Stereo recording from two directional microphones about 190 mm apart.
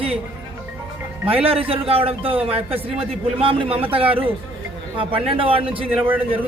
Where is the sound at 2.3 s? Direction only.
5° right (ahead or behind).